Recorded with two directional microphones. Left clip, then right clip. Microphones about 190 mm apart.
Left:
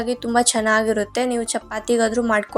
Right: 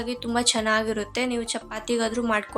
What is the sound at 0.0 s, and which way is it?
A woman's voice, 20° left (ahead or behind).